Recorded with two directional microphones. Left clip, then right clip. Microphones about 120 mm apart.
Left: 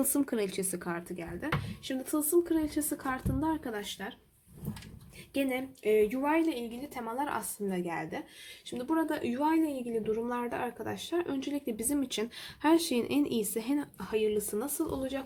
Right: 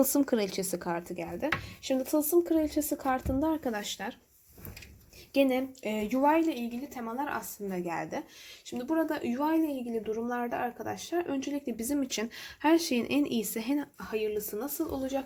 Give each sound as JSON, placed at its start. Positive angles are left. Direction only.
{"t": 0.0, "sound": "speech", "side_deg": -15}
{"t": 3.7, "sound": "speech", "side_deg": -45}
{"t": 5.5, "sound": "a sound", "side_deg": -35}
{"t": 6.2, "sound": "speech", "side_deg": -20}
{"t": 6.9, "sound": "a woman's voice", "side_deg": 0}
{"t": 7.9, "sound": "speech", "side_deg": -15}
{"t": 8.8, "sound": "speech", "side_deg": 10}